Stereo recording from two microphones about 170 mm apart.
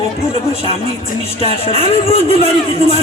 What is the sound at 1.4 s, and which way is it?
Speech, 35° left (ahead or behind).